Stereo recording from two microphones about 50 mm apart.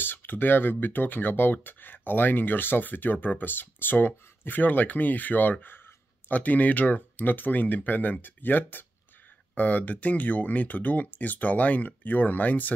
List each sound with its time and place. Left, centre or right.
0.0 s speech: left